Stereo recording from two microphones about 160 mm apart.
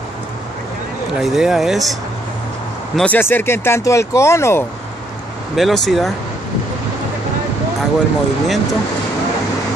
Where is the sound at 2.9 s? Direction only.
10° left (ahead or behind).